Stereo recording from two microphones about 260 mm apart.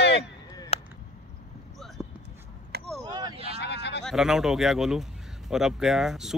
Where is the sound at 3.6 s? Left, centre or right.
Left.